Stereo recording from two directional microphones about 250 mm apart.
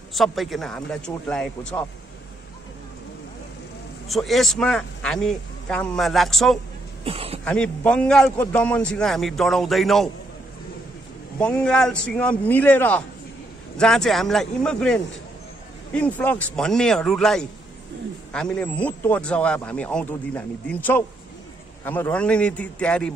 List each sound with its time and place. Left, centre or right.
0.1 s speech: centre
4.1 s speech: centre
7.1 s speech: right
7.4 s speech: centre
11.3 s speech: centre